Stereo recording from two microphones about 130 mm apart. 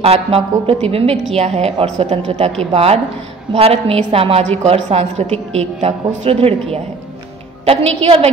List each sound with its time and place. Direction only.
0.0 s a woman's voice: 50° right (ahead or behind)